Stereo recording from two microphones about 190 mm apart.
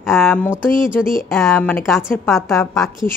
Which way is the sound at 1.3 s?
Centre (ahead or behind).